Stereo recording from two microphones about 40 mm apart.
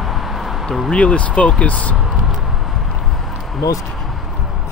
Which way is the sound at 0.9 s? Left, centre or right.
Left.